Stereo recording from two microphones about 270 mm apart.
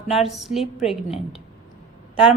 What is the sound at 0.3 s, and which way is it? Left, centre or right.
Speech, centre.